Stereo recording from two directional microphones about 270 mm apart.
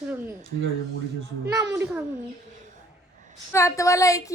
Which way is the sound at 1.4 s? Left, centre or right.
Centre.